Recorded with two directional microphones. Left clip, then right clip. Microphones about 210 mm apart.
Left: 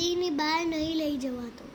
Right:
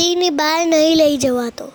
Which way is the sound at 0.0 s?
50° right (ahead or behind).